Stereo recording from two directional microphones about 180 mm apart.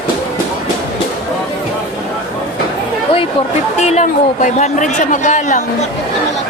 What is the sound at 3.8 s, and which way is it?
Speech, 40° left (ahead or behind).